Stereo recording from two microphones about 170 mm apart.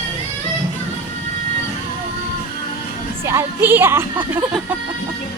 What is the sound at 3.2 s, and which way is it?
Music, 15° right (ahead or behind).